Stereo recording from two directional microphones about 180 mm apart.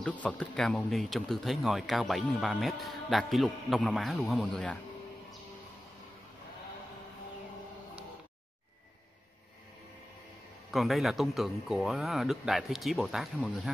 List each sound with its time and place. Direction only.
0.0 s speech: 10° left (ahead or behind)
10.7 s speech: centre (ahead or behind)